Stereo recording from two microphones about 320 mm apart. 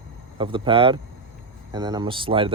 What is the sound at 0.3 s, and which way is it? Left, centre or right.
Speech, centre.